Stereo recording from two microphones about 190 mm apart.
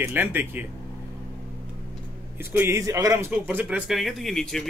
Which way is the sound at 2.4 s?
10° right (ahead or behind).